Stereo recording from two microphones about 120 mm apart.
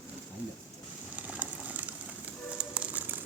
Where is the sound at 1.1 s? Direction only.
15° right (ahead or behind).